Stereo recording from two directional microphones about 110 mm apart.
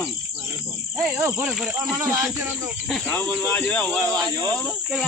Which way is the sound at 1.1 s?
25° right (ahead or behind).